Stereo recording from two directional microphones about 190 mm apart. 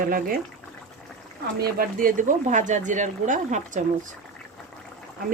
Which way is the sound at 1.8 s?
45° right (ahead or behind).